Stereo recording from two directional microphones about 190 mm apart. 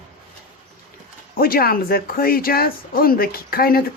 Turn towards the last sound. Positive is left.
turn(degrees=50)  # may be behind; listen again after turning